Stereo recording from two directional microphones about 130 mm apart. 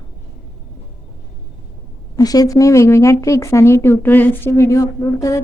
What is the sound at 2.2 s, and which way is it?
Speech, 30° left (ahead or behind).